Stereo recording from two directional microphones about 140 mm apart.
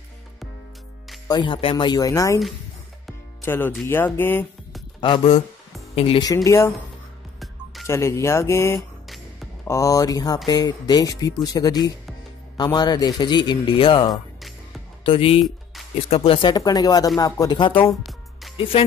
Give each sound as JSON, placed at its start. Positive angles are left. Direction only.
{"t": 1.2, "sound": "speech", "side_deg": 30}
{"t": 3.4, "sound": "speech", "side_deg": 15}
{"t": 5.0, "sound": "a man's voice", "side_deg": 40}
{"t": 6.2, "sound": "speech", "side_deg": 25}
{"t": 7.8, "sound": "a man's voice", "side_deg": 20}